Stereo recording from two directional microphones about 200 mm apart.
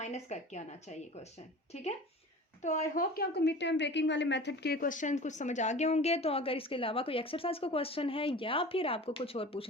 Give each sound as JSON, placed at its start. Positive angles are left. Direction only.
{"t": 0.0, "sound": "a woman's voice", "side_deg": 35}